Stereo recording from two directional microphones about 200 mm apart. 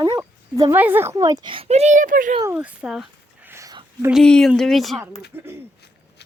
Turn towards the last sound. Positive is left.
turn(degrees=-10)  # may be behind; listen again after turning